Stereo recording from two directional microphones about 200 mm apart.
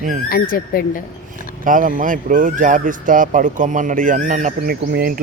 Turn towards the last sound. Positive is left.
turn(degrees=-50)  # may be behind; listen again after turning